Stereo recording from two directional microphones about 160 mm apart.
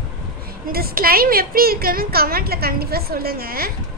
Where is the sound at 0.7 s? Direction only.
70° right (ahead or behind).